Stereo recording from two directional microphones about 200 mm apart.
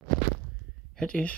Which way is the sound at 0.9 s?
5° left (ahead or behind).